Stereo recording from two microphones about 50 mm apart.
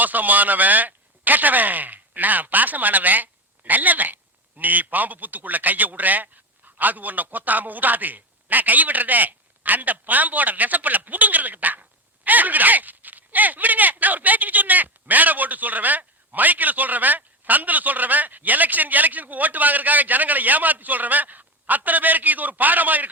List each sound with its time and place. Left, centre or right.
0.0 s a man's voice: right